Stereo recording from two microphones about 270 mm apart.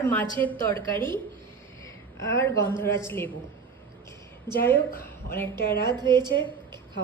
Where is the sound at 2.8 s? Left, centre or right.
Centre.